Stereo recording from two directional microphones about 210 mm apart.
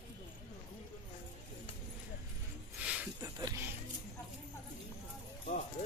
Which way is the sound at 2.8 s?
10° right (ahead or behind).